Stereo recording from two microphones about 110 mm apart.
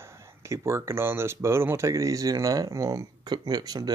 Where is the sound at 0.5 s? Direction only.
25° right (ahead or behind).